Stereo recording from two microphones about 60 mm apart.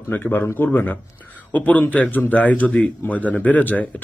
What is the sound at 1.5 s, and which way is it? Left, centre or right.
A man's voice, left.